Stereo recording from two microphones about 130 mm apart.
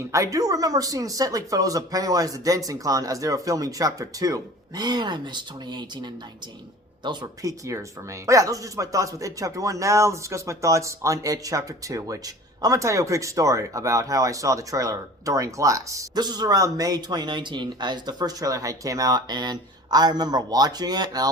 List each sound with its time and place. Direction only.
0.1 s speech: 25° right (ahead or behind)